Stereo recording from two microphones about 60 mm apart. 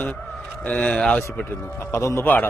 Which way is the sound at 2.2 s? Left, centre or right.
Left.